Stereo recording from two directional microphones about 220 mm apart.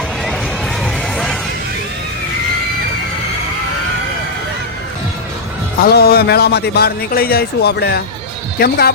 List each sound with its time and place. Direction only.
0.8 s crowd: centre (ahead or behind)
5.8 s speech: 45° left (ahead or behind)